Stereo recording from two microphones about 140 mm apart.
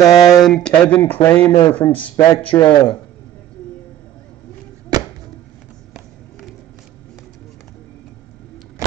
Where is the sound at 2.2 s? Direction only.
40° left (ahead or behind).